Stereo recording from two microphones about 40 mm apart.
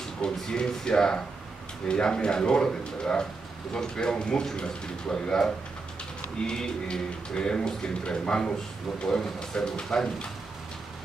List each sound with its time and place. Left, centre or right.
0.2 s speech: centre